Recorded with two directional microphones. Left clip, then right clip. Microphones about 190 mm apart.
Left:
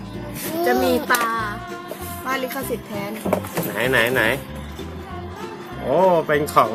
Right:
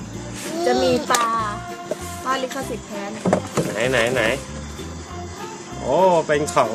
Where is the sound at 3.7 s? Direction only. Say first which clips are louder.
Left 2 dB; 5° left (ahead or behind).